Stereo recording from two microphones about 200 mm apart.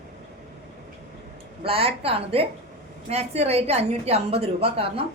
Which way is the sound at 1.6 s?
30° right (ahead or behind).